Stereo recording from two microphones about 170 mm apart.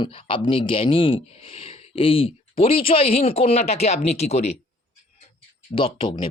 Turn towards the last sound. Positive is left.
turn(degrees=30)  # may be behind; listen again after turning